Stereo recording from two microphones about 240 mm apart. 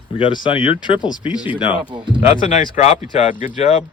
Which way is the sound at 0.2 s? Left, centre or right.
Centre.